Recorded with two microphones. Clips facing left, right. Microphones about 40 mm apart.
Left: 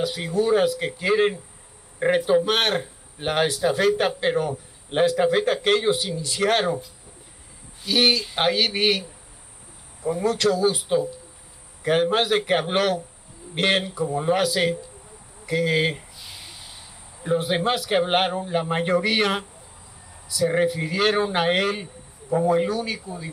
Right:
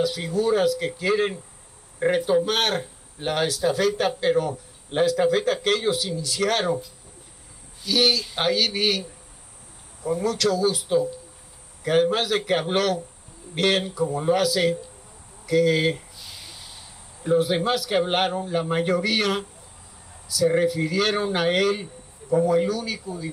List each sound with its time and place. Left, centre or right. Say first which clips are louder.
0.0 s speech: even; left
7.8 s speech: left 1 dB; left
10.2 s speech: left 2 dB; left
15.4 s a sound: right 2 dB; left
17.2 s speech: right 1 dB; centre
20.4 s speech: right 1 dB; left